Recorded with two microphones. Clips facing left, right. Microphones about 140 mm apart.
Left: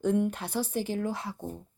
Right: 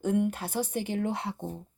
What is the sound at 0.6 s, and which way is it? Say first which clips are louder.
Speech: left 1 dB; 60° right (ahead or behind).